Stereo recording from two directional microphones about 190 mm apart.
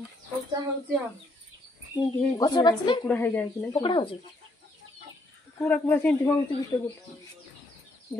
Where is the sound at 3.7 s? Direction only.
25° left (ahead or behind).